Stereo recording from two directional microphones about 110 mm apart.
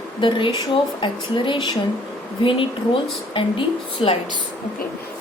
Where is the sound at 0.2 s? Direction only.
50° left (ahead or behind).